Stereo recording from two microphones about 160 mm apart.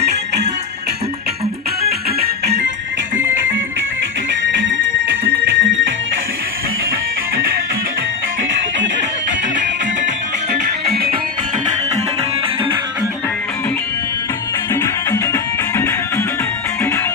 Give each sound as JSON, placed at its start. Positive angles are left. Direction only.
{"t": 0.0, "sound": "music", "side_deg": -90}
{"t": 5.1, "sound": "music", "side_deg": -65}
{"t": 14.7, "sound": "music", "side_deg": 15}